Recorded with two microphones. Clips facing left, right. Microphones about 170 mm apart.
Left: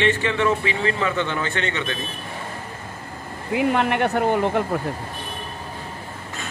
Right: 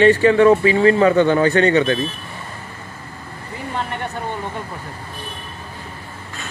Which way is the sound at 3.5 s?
75° left (ahead or behind).